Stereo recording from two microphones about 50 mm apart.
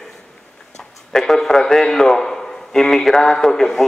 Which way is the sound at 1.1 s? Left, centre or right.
Centre.